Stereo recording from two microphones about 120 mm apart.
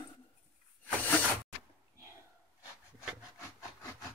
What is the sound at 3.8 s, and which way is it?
Wood, 25° left (ahead or behind).